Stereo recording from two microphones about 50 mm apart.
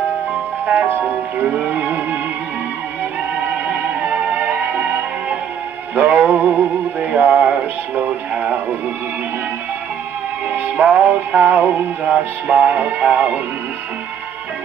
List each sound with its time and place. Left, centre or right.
1.4 s music: right
3.6 s music: right
10.8 s music: right
12.0 s music: centre